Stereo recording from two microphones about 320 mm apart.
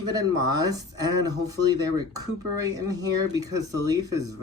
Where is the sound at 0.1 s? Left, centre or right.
Centre.